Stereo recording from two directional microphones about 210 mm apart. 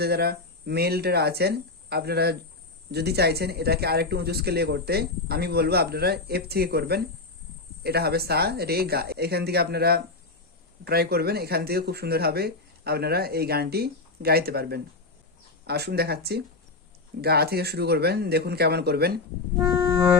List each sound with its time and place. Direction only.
0.0 s a man's voice: 50° right (ahead or behind)
19.6 s music: 10° right (ahead or behind)